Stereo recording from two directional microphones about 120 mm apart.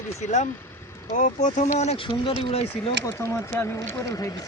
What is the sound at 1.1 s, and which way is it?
Speech, 90° left.